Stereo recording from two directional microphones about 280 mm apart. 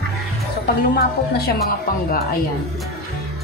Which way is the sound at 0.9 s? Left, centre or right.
Left.